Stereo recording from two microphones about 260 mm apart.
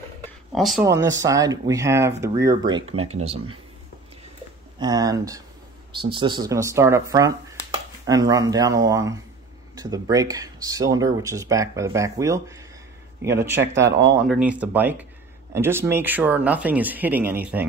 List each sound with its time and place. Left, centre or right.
0.5 s speech: centre
0.8 s speech: centre
4.7 s speech: centre
13.6 s speech: right
14.2 s speech: centre